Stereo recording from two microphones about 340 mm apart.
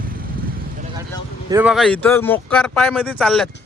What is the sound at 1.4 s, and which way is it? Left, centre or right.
Speech, centre.